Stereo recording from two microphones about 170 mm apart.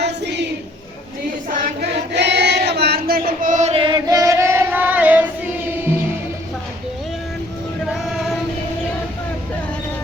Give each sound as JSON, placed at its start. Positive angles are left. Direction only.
{"t": 0.0, "sound": "a sound", "side_deg": -90}
{"t": 1.8, "sound": "choir", "side_deg": -85}
{"t": 8.0, "sound": "female singing", "side_deg": 0}